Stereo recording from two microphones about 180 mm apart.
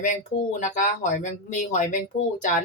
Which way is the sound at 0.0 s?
45° left (ahead or behind).